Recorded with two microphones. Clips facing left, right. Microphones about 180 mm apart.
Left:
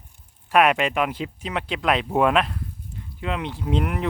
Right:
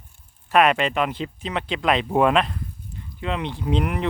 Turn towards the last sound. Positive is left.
turn(degrees=0)  # may be behind; listen again after turning